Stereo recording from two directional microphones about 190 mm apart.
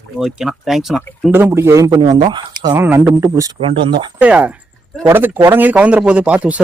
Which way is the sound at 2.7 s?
10° right (ahead or behind).